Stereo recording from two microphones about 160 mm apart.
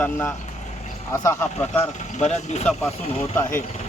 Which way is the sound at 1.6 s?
45° left (ahead or behind).